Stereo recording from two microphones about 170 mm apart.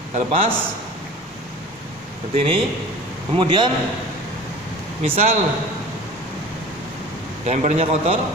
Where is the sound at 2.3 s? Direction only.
35° right (ahead or behind).